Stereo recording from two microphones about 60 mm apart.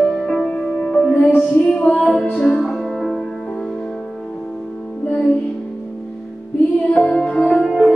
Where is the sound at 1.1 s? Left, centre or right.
Left.